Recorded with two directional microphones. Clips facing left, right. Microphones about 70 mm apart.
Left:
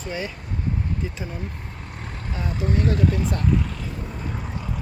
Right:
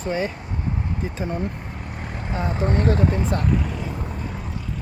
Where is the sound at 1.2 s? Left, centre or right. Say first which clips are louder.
Right 7 dB; right.